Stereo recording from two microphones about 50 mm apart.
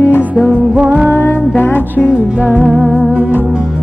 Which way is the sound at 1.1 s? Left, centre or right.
Left.